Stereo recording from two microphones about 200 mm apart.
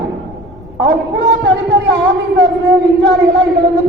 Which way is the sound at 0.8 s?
60° right (ahead or behind).